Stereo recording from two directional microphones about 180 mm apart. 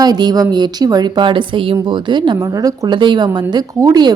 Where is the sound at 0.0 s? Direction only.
20° right (ahead or behind).